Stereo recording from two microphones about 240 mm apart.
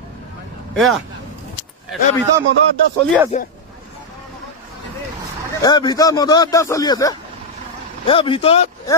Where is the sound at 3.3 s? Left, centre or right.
Left.